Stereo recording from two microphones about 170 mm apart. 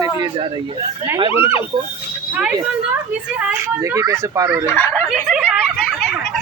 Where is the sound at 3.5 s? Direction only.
15° right (ahead or behind).